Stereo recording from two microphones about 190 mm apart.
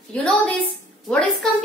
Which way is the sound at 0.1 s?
5° left (ahead or behind).